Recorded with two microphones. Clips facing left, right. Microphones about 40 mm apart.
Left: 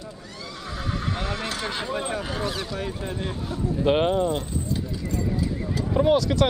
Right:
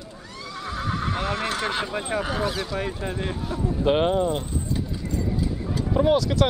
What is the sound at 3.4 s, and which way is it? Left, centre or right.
Speech, centre.